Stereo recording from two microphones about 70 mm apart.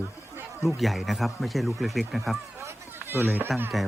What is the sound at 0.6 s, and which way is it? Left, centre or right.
Speech, centre.